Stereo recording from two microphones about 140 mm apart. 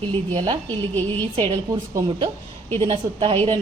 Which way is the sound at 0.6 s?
15° left (ahead or behind).